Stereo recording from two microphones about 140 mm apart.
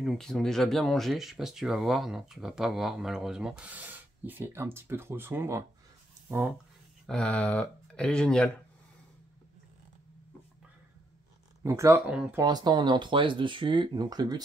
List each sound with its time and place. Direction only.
0.0 s speech: centre (ahead or behind); by 6.5 s 15° right (ahead or behind)
7.1 s speech: 5° left (ahead or behind)
11.6 s speech: 20° right (ahead or behind)
12.1 s speech: 10° right (ahead or behind)
12.4 s speech: 30° right (ahead or behind)